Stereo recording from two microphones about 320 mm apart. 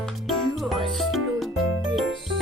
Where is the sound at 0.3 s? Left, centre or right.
Centre.